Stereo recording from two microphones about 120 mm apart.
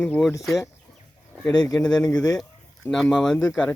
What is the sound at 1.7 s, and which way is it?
Speech, 5° left (ahead or behind).